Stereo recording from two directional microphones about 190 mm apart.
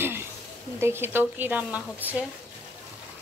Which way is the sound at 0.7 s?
10° right (ahead or behind).